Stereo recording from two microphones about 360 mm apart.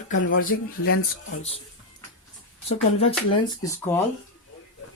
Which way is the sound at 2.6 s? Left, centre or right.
Centre.